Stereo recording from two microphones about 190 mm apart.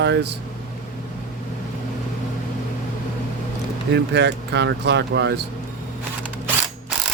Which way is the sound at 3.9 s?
65° right (ahead or behind).